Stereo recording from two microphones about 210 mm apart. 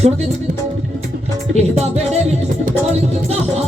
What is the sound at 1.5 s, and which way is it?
Music, 30° right (ahead or behind).